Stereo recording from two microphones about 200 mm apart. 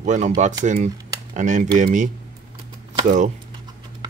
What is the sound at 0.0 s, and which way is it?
Speech, 35° right (ahead or behind).